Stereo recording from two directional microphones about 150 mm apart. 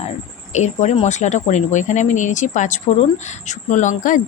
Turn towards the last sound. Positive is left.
turn(degrees=60)  # may be behind; listen again after turning